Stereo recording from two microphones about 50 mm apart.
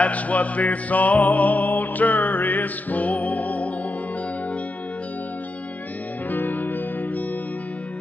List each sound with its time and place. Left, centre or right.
0.0 s music: left
6.3 s music: left